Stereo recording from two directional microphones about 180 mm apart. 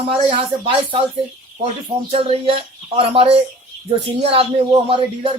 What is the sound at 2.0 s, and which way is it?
Speech, 30° right (ahead or behind).